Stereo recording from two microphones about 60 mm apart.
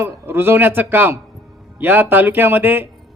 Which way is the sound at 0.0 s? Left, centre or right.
Right.